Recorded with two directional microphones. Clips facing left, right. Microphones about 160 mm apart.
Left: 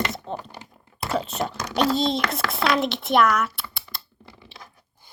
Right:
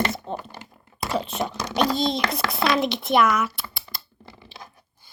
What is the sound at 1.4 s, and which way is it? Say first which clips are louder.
Speech: even; 20° right (ahead or behind).